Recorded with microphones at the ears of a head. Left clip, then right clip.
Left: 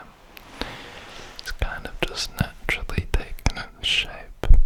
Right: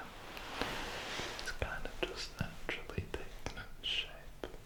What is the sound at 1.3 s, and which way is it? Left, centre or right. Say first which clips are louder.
Whispering: left 8 dB; left.